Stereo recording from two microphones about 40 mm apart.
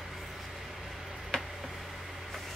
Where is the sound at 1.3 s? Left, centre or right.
Centre.